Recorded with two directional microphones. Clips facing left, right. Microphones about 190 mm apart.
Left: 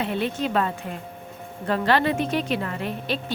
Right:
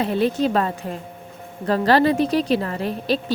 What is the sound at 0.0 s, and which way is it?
A woman's voice, 40° right (ahead or behind).